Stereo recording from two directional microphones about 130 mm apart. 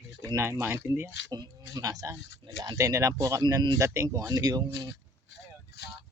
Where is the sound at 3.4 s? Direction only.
35° right (ahead or behind).